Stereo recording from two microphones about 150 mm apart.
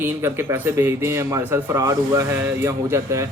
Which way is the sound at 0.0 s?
15° right (ahead or behind).